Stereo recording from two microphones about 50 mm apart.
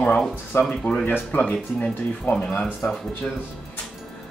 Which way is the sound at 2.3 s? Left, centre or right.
Left.